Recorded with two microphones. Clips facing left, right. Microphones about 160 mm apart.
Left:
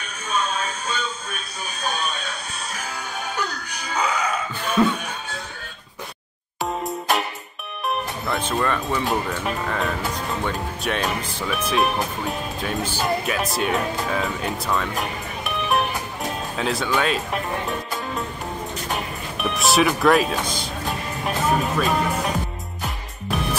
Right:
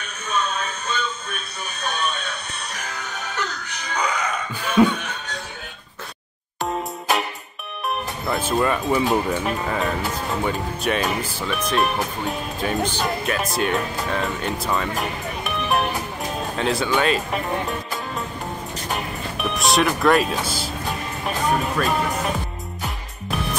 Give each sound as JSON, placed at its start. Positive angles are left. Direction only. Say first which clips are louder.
{"t": 0.8, "sound": "music", "louder": "right 1 dB", "side_deg": 10}
{"t": 2.7, "sound": "music", "louder": "left 2 dB", "side_deg": 10}
{"t": 4.6, "sound": "a sound", "louder": "right 3 dB", "side_deg": -10}
{"t": 4.9, "sound": "music", "louder": "even", "side_deg": 10}
{"t": 6.6, "sound": "music", "louder": "even", "side_deg": 0}
{"t": 8.3, "sound": "music", "louder": "right 3 dB", "side_deg": -5}
{"t": 9.4, "sound": "speech", "louder": "right 1 dB", "side_deg": 0}